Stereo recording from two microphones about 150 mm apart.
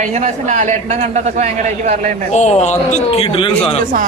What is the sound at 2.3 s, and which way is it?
Speech, 50° left (ahead or behind).